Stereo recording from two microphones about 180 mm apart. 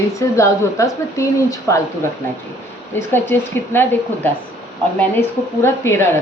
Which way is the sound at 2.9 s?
10° left (ahead or behind).